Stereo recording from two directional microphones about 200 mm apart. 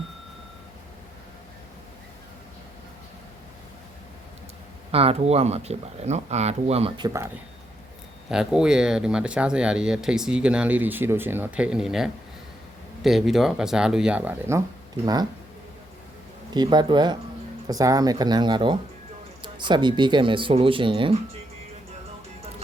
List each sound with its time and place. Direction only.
4.9 s speech: 30° right (ahead or behind)
8.3 s speech: 5° right (ahead or behind); by 15.3 s 20° right (ahead or behind)
16.6 s speech: 20° right (ahead or behind)